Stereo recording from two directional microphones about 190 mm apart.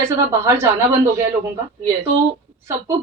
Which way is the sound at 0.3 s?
15° right (ahead or behind).